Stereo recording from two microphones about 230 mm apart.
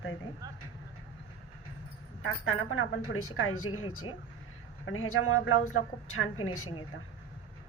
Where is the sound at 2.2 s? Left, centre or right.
Left.